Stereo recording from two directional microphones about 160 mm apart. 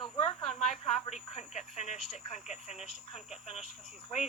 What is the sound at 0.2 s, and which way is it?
Snake, 45° left (ahead or behind).